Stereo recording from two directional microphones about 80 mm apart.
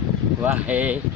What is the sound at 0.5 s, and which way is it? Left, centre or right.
Speech, centre.